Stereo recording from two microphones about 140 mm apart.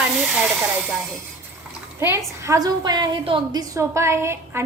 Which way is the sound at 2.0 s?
20° right (ahead or behind).